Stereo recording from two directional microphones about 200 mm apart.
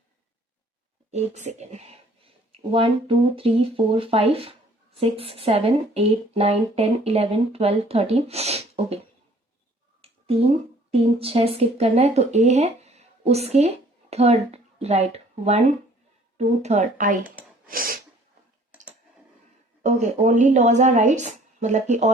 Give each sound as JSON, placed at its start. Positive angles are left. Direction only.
{"t": 1.1, "sound": "a woman's voice", "side_deg": -35}
{"t": 10.0, "sound": "a sound", "side_deg": -30}
{"t": 11.2, "sound": "a woman's voice", "side_deg": -30}
{"t": 17.7, "sound": "sneeze", "side_deg": -45}
{"t": 19.8, "sound": "a woman's voice", "side_deg": -35}